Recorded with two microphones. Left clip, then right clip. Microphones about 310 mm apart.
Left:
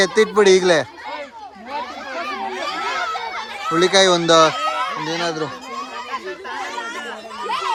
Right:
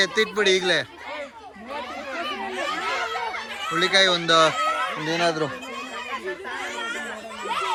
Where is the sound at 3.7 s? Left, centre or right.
Centre.